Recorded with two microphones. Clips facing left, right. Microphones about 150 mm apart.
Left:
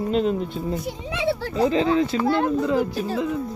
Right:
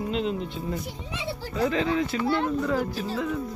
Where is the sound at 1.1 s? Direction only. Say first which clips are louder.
Left 14 dB; 75° left (ahead or behind).